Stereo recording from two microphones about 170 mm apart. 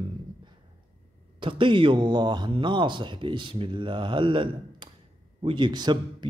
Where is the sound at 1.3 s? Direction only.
30° right (ahead or behind).